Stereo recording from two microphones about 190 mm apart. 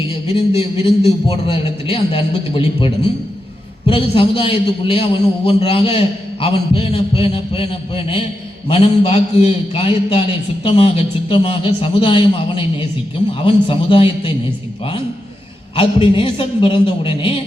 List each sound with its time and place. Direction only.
0.3 s a man's voice: 30° left (ahead or behind)
15.7 s a man's voice: 30° left (ahead or behind)